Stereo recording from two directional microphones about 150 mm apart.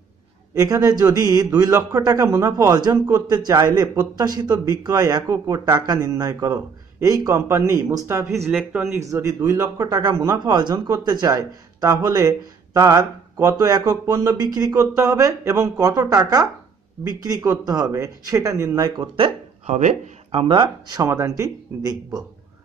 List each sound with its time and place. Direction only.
0.6 s a man's voice: 20° right (ahead or behind)
8.5 s speech: 5° right (ahead or behind)
9.1 s a man's voice: 20° right (ahead or behind)
19.1 s speech: 40° right (ahead or behind); by 22.2 s 25° right (ahead or behind)